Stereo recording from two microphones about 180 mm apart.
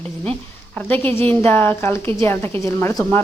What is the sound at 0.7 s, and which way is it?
Speech, 10° left (ahead or behind).